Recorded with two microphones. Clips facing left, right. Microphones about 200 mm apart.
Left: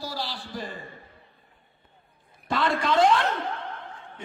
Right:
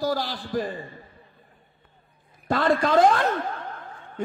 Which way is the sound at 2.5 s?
45° right (ahead or behind).